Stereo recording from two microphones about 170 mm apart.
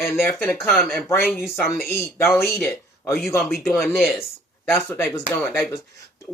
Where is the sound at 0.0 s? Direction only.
15° left (ahead or behind).